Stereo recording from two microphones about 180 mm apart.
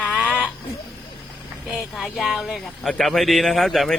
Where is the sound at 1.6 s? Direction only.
Centre (ahead or behind).